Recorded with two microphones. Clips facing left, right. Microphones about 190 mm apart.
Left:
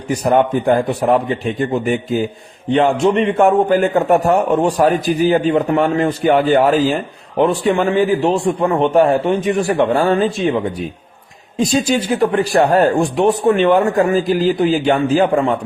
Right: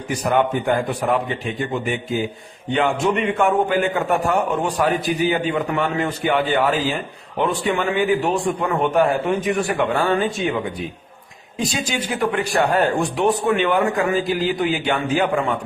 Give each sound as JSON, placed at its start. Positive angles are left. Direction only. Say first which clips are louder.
{"t": 0.1, "sound": "a man's voice", "louder": "left 5 dB", "side_deg": 35}